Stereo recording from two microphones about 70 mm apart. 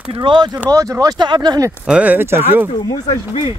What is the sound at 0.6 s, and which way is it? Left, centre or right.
Speech, right.